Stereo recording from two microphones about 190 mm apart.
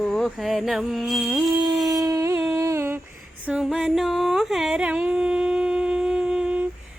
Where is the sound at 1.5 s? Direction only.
20° right (ahead or behind).